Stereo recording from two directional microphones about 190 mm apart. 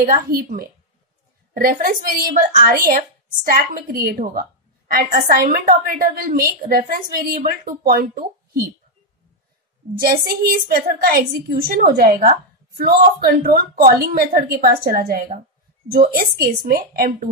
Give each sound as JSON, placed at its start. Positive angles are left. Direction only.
{"t": 0.0, "sound": "a woman's voice", "side_deg": -50}
{"t": 9.9, "sound": "a woman's voice", "side_deg": -50}